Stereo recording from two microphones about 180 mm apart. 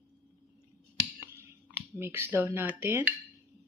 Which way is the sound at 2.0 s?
15° right (ahead or behind).